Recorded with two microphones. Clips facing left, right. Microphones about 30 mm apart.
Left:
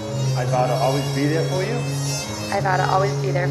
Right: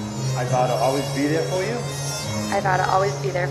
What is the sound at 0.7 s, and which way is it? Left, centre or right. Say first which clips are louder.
Speech: even; left.